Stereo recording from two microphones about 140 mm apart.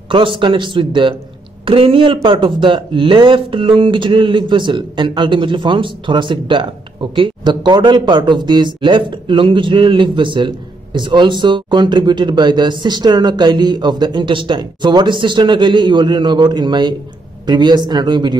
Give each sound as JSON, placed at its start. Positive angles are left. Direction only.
{"t": 0.1, "sound": "speech", "side_deg": -35}